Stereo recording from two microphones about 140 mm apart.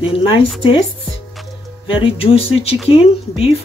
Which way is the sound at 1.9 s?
40° left (ahead or behind).